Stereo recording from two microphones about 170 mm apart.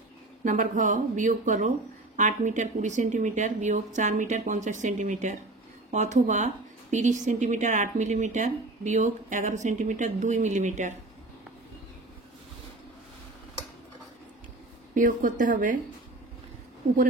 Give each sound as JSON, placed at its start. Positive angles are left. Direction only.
{"t": 0.4, "sound": "a woman's voice", "side_deg": -50}
{"t": 15.0, "sound": "a woman's voice", "side_deg": -50}